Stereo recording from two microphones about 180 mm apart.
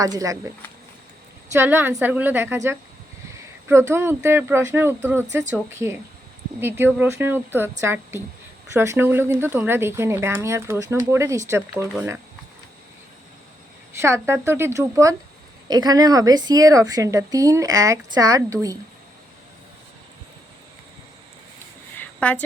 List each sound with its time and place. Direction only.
0.0 s speech: 20° right (ahead or behind)
1.5 s speech: 10° right (ahead or behind)
6.6 s speech: 10° right (ahead or behind)
14.0 s speech: 15° right (ahead or behind)
21.9 s a sound: 10° left (ahead or behind)